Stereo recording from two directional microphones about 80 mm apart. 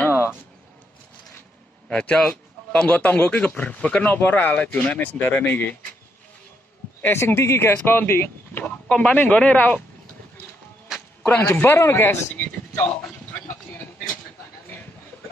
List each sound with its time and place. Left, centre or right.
0.0 s a sound: left
1.9 s a man's voice: centre
7.0 s a man's voice: left
8.8 s speech: centre
11.2 s a man's voice: left